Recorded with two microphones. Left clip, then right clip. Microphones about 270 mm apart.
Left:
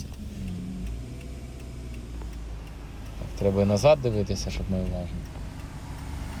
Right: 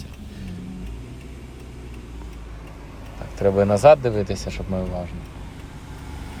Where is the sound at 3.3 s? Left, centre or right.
Centre.